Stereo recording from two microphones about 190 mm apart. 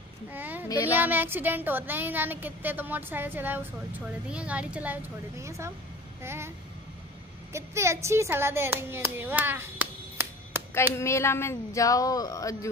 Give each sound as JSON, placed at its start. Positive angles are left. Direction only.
{"t": 0.3, "sound": "speech", "side_deg": -10}
{"t": 7.5, "sound": "speech", "side_deg": -15}
{"t": 11.0, "sound": "speech", "side_deg": 15}